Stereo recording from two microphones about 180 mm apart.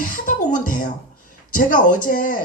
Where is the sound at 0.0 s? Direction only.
50° left (ahead or behind).